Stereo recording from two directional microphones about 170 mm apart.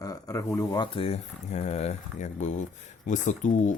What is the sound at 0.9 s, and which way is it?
Speech, 35° left (ahead or behind).